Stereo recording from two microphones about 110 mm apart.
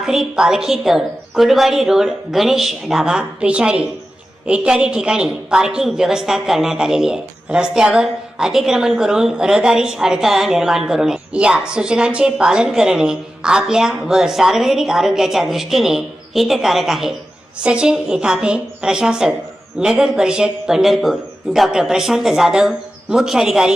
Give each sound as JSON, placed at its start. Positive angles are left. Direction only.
{"t": 0.0, "sound": "a woman's voice", "side_deg": -5}